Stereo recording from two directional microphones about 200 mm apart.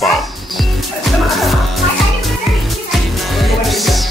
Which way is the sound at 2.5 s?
Centre (ahead or behind).